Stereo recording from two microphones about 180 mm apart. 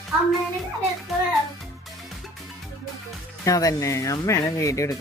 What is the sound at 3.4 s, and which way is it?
Speech, 20° left (ahead or behind).